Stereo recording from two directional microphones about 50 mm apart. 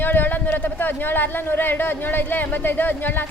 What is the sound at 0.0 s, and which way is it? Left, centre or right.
Speech, left.